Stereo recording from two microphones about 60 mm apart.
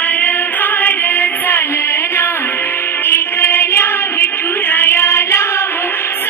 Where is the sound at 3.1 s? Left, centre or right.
Left.